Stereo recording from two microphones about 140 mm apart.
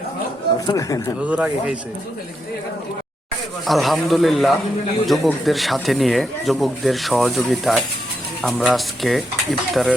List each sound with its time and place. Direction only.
0.7 s speech: 25° left (ahead or behind)
1.2 s speech: 10° right (ahead or behind)
3.7 s speech: centre (ahead or behind)